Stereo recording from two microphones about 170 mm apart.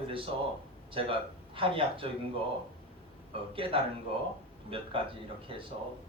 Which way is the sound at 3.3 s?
30° right (ahead or behind).